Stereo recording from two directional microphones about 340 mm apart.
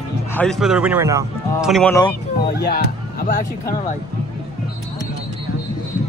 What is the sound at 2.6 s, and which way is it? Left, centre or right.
Music, left.